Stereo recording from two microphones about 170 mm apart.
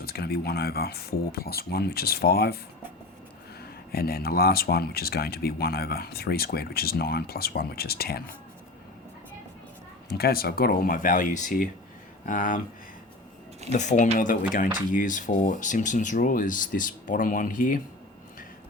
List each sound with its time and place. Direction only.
0.0 s speech: 65° left (ahead or behind)
3.9 s speech: 65° left (ahead or behind)
10.2 s speech: 65° left (ahead or behind)
13.7 s speech: 45° left (ahead or behind)